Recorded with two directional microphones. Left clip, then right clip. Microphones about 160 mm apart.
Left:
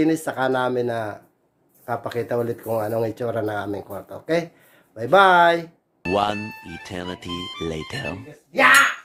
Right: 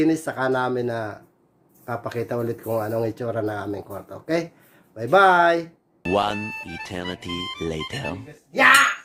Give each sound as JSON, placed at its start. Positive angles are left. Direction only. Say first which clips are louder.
{"t": 0.0, "sound": "speech", "louder": "left 1 dB", "side_deg": 10}
{"t": 6.0, "sound": "speech", "louder": "even", "side_deg": 0}